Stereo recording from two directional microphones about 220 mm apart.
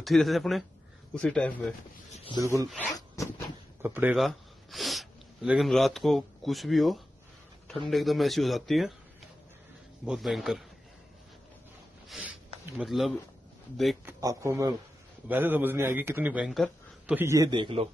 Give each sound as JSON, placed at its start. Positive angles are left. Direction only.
{"t": 0.0, "sound": "speech", "side_deg": 0}
{"t": 2.3, "sound": "speech", "side_deg": -15}
{"t": 3.2, "sound": "cat", "side_deg": 15}
{"t": 3.8, "sound": "speech", "side_deg": -10}
{"t": 10.0, "sound": "speech", "side_deg": 0}
{"t": 12.1, "sound": "a sound", "side_deg": -5}
{"t": 13.7, "sound": "speech", "side_deg": 0}
{"t": 14.2, "sound": "speech", "side_deg": -15}